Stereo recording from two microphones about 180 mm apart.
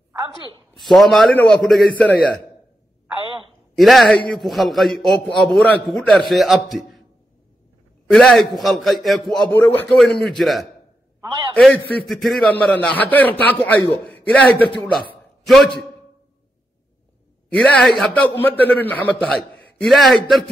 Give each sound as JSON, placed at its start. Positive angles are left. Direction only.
{"t": 0.7, "sound": "a man's voice", "side_deg": 0}
{"t": 3.7, "sound": "a man's voice", "side_deg": 0}
{"t": 8.1, "sound": "a man's voice", "side_deg": 0}
{"t": 11.1, "sound": "a sound", "side_deg": -25}
{"t": 11.5, "sound": "a man's voice", "side_deg": 10}
{"t": 17.5, "sound": "a man's voice", "side_deg": 5}